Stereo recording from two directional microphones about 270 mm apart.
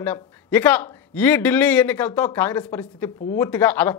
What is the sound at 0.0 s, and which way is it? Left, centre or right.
A man's voice, centre.